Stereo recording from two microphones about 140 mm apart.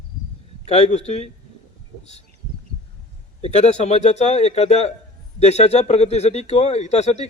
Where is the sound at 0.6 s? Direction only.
50° left (ahead or behind).